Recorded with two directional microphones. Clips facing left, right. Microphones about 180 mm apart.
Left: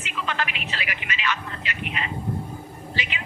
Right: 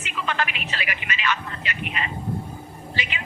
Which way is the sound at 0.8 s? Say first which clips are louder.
Right 3 dB; 50° right (ahead or behind).